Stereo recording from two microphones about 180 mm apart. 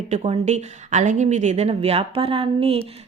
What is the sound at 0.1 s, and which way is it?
A woman's voice, 35° right (ahead or behind).